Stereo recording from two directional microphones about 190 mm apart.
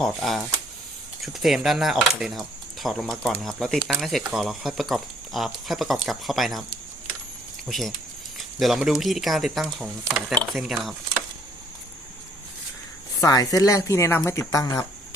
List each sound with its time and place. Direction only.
0.0 s speech: 5° left (ahead or behind)
7.7 s speech: centre (ahead or behind)
13.2 s speech: 20° left (ahead or behind)